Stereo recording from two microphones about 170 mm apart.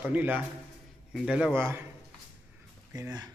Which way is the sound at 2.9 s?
20° right (ahead or behind).